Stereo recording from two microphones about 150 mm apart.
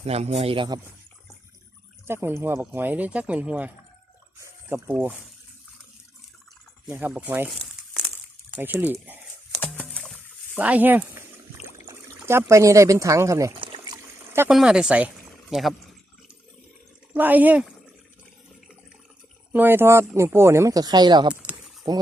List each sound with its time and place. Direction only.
0.0 s speech: 45° right (ahead or behind)
2.0 s speech: 15° right (ahead or behind)
4.7 s speech: 10° right (ahead or behind)
6.8 s speech: 10° right (ahead or behind)
8.5 s speech: 10° right (ahead or behind)
9.9 s rowboat: centre (ahead or behind)
12.0 s speech: 15° right (ahead or behind)
14.5 s speech: 5° right (ahead or behind)
17.2 s speech: 10° right (ahead or behind)
19.5 s speech: 15° right (ahead or behind); by 22.0 s 30° right (ahead or behind)